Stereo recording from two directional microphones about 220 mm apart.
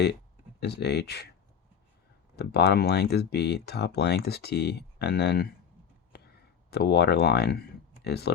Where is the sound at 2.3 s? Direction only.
45° left (ahead or behind).